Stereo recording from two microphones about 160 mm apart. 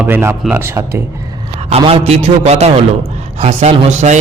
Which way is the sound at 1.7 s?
40° right (ahead or behind).